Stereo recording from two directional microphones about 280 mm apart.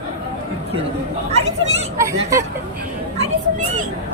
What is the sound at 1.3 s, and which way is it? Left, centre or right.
Speech, right.